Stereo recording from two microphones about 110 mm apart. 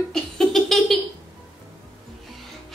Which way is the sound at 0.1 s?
5° left (ahead or behind).